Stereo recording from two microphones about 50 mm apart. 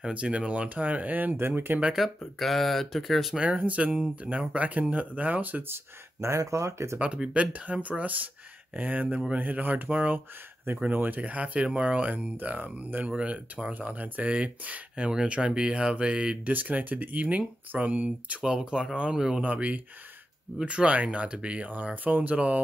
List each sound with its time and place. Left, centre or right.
0.1 s speech: right
1.3 s speech: right
2.0 s speech: centre
3.3 s speech: right
6.2 s speech: right
7.0 s speech: right
11.1 s speech: right
18.4 s speech: centre
19.4 s speech: right